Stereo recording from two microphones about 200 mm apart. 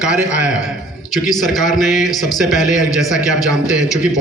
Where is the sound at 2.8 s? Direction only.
15° left (ahead or behind).